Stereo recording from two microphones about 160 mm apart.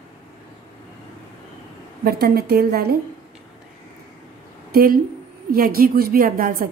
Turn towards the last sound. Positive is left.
turn(degrees=-65)  # may be behind; listen again after turning